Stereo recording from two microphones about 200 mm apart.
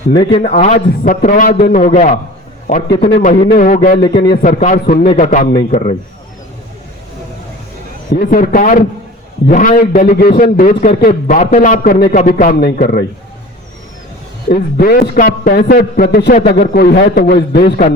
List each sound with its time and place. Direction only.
0.3 s a man's voice: 30° left (ahead or behind)
3.5 s a man's voice: 45° left (ahead or behind)
4.4 s a man's voice: 40° left (ahead or behind)
8.1 s a man's voice: 45° left (ahead or behind)
14.5 s a man's voice: 50° left (ahead or behind)